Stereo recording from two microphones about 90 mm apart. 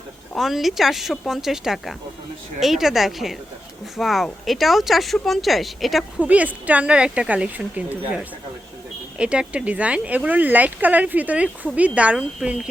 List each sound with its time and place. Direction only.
0.3 s speech: centre (ahead or behind)
6.1 s speech: 15° right (ahead or behind)